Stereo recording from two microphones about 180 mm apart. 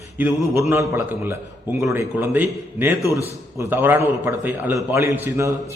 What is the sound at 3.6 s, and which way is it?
A man's voice, 10° right (ahead or behind).